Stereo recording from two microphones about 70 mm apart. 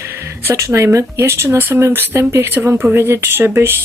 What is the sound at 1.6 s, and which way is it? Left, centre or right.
Speech, right.